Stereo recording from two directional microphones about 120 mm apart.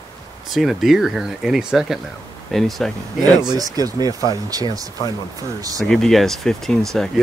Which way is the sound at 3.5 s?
30° right (ahead or behind).